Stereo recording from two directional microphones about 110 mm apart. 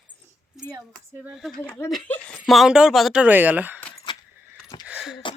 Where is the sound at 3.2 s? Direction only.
15° right (ahead or behind).